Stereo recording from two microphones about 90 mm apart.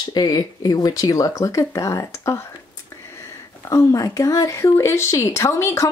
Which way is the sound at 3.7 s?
40° left (ahead or behind).